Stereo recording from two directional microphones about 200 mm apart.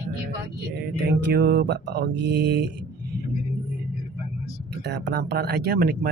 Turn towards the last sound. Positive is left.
turn(degrees=-50)  # may be behind; listen again after turning